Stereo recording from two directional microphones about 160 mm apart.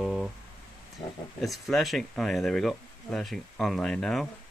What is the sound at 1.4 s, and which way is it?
Speech, centre (ahead or behind).